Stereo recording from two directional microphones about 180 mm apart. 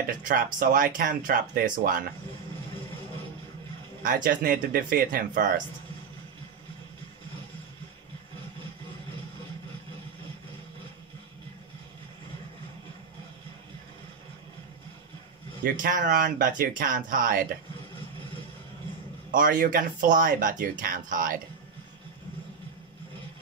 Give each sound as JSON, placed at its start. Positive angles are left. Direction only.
{"t": 0.2, "sound": "speech", "side_deg": -50}
{"t": 4.0, "sound": "speech", "side_deg": -50}
{"t": 15.6, "sound": "speech", "side_deg": -50}
{"t": 19.3, "sound": "speech", "side_deg": -50}